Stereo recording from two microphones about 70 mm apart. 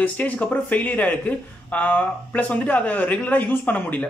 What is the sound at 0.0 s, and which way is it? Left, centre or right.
A man's voice, centre.